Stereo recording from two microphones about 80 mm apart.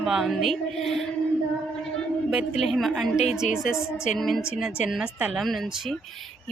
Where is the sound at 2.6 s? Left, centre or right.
Centre.